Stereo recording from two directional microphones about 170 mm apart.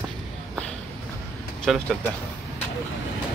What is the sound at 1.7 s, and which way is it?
Speech, centre (ahead or behind).